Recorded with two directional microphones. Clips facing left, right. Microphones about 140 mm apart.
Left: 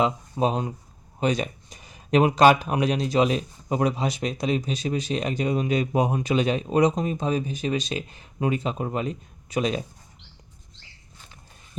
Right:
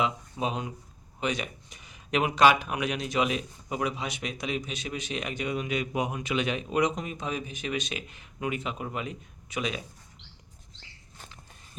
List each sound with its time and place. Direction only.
0.0 s speech: 40° left (ahead or behind)